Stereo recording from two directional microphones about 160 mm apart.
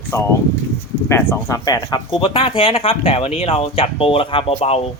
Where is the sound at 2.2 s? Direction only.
35° left (ahead or behind).